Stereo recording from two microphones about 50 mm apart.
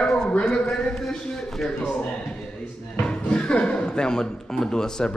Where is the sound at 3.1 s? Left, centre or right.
Left.